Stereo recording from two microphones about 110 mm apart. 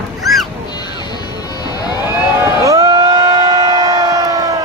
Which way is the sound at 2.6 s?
30° right (ahead or behind).